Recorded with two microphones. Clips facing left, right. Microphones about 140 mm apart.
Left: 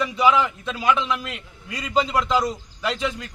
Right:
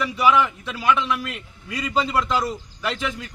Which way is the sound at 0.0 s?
20° left (ahead or behind).